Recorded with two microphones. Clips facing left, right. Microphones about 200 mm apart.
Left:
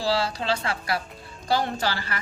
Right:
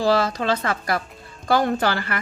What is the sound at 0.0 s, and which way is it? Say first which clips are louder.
Speech: right 5 dB; 50° right (ahead or behind).